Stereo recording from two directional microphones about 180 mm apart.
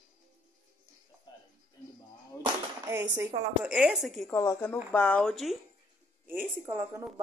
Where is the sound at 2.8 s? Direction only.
15° right (ahead or behind).